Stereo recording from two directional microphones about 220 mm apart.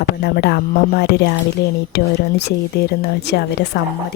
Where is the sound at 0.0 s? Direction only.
45° left (ahead or behind).